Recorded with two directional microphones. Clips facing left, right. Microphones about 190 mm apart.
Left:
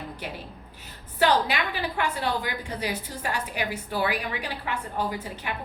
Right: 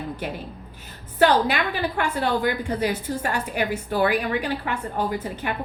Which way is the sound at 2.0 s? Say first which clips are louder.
Right 4 dB; 50° right (ahead or behind).